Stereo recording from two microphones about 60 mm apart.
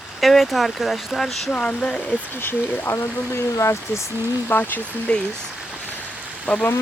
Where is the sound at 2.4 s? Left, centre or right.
Left.